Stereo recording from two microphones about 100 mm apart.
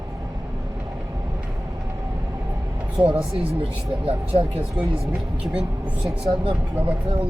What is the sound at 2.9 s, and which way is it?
Speech, 60° right (ahead or behind).